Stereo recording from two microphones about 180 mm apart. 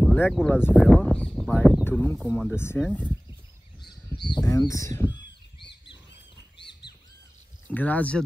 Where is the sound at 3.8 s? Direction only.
25° left (ahead or behind).